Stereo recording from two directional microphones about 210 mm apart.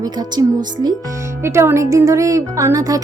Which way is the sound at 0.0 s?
20° right (ahead or behind).